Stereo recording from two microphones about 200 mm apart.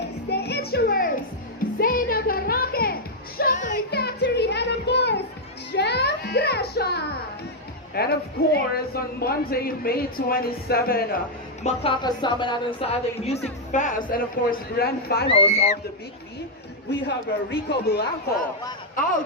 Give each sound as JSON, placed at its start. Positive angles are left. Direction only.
{"t": 0.3, "sound": "music", "side_deg": 55}
{"t": 4.0, "sound": "music", "side_deg": 55}
{"t": 7.9, "sound": "speech", "side_deg": 50}
{"t": 11.6, "sound": "speech", "side_deg": 30}
{"t": 15.3, "sound": "speech", "side_deg": 30}
{"t": 17.1, "sound": "speech", "side_deg": 55}